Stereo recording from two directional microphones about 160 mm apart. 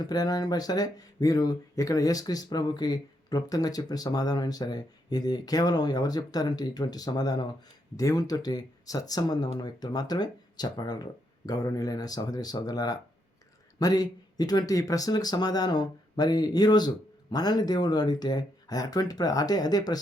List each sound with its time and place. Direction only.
0.0 s speech: 25° left (ahead or behind)